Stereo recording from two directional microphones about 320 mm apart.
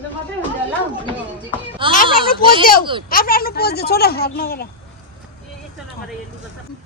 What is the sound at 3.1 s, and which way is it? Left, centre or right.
A woman's voice, left.